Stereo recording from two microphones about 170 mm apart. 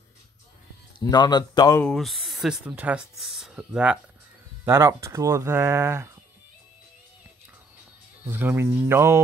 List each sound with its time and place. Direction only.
0.9 s speech: 25° left (ahead or behind)
1.8 s speech: 5° left (ahead or behind)
4.6 s speech: 15° right (ahead or behind)
8.3 s speech: 15° right (ahead or behind)